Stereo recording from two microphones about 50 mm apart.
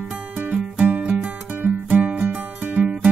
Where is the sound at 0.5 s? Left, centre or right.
Right.